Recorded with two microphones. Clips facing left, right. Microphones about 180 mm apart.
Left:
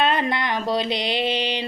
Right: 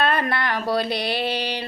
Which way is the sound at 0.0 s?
20° left (ahead or behind).